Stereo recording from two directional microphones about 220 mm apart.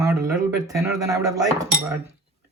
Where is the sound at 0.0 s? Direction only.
15° right (ahead or behind).